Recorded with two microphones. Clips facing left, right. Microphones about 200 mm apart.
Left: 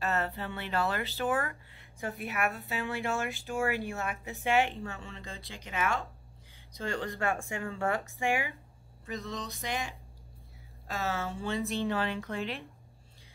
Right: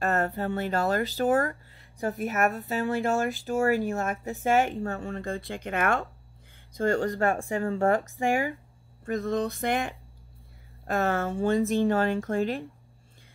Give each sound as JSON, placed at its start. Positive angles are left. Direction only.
{"t": 0.0, "sound": "speech", "side_deg": -50}
{"t": 7.9, "sound": "speech", "side_deg": -45}